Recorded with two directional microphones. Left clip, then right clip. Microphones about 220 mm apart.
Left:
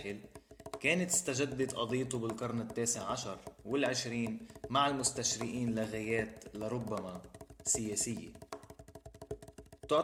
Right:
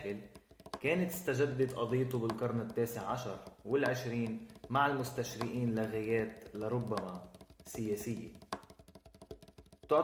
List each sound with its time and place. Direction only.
0.6 s speech: 35° left (ahead or behind)